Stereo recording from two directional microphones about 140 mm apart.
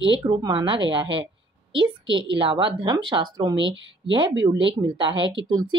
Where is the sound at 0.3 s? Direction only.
35° right (ahead or behind).